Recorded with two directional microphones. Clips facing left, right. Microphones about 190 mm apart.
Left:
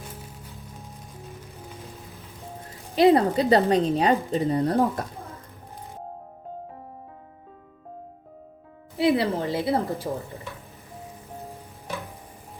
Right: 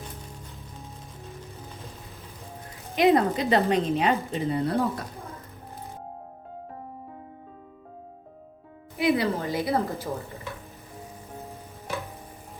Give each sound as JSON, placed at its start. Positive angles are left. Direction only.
{"t": 2.9, "sound": "a woman's voice", "side_deg": 35}
{"t": 9.0, "sound": "a woman's voice", "side_deg": 30}